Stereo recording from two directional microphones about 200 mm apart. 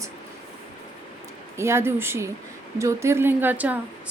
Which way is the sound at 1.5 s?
15° right (ahead or behind).